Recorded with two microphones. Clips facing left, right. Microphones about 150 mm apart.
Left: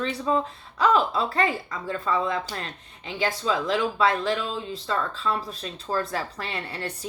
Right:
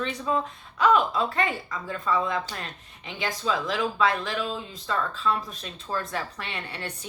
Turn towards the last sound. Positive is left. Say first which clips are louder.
# left 3 dB
turn(degrees=35)  # may be behind; listen again after turning